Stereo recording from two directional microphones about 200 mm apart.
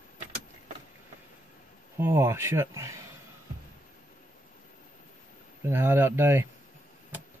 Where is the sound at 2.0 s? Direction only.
15° right (ahead or behind).